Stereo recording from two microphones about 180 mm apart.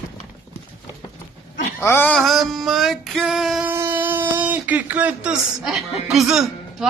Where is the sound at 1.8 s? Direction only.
10° left (ahead or behind).